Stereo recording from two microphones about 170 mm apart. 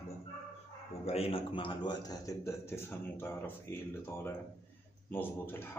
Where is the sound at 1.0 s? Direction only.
35° left (ahead or behind); by 5.7 s 15° left (ahead or behind).